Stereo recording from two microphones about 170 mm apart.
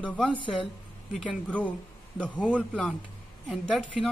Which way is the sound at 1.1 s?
Centre (ahead or behind).